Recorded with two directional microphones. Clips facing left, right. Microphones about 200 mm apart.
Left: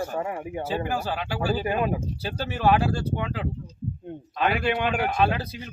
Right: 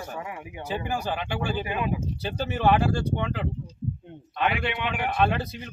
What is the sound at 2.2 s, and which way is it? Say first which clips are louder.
Speech: even; centre (ahead or behind).